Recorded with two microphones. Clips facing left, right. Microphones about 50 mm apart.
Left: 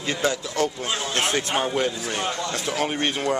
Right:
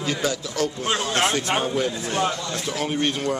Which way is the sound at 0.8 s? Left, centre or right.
Right.